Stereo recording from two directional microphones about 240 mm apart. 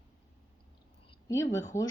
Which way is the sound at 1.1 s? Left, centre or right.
Centre.